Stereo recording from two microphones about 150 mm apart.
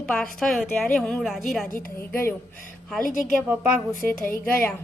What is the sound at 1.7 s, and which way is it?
Speech, 15° left (ahead or behind).